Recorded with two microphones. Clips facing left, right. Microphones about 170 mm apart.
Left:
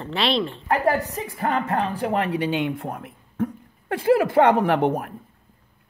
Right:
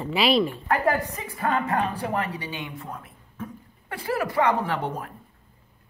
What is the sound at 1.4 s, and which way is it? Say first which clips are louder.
Speech: left 1 dB; 35° left (ahead or behind).